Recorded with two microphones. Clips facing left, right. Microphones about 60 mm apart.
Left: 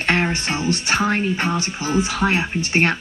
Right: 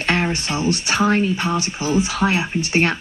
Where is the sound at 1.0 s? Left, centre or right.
Centre.